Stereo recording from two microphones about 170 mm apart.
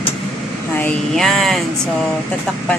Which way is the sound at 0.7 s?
5° left (ahead or behind).